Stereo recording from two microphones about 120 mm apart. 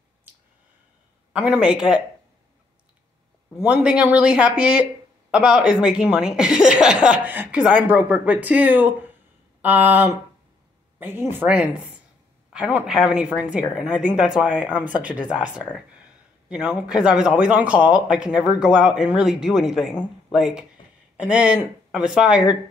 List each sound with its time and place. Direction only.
1.3 s a woman's voice: 10° right (ahead or behind)
3.6 s a woman's voice: 10° right (ahead or behind)